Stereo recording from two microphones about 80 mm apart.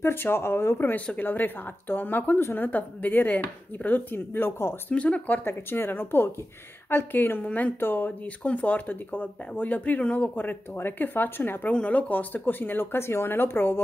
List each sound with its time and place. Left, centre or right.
0.0 s speech: left
4.9 s speech: centre
5.4 s speech: left
11.7 s speech: centre